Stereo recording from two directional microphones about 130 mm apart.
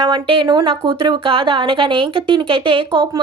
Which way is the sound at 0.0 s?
40° right (ahead or behind).